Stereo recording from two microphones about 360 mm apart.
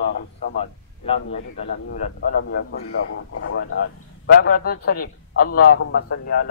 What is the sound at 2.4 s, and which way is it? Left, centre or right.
A man's voice, left.